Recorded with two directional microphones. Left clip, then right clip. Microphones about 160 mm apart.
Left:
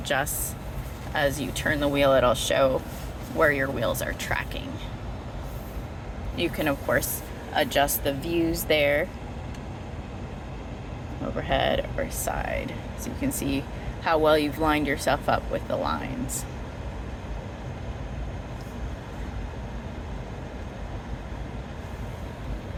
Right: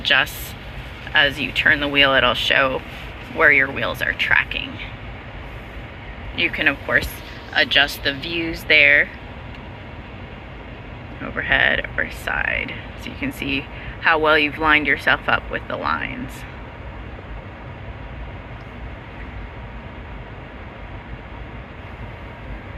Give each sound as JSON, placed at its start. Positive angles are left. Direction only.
{"t": 0.0, "sound": "speech", "side_deg": 20}
{"t": 6.3, "sound": "speech", "side_deg": 30}
{"t": 11.3, "sound": "speech", "side_deg": 30}